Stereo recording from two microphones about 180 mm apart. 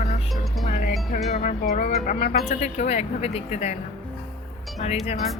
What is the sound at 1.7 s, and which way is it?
Speech, 50° left (ahead or behind).